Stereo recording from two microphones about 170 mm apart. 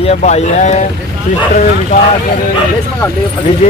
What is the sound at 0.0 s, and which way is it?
Speech, 40° left (ahead or behind).